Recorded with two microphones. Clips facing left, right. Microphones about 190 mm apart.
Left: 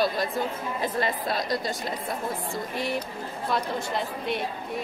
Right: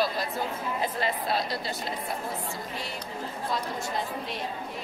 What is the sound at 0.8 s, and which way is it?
Speech, 45° left (ahead or behind).